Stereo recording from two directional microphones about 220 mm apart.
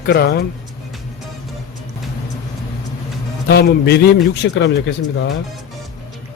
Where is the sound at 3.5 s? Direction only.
45° left (ahead or behind).